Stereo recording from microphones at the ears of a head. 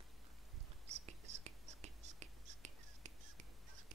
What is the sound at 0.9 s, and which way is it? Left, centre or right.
Whispering, right.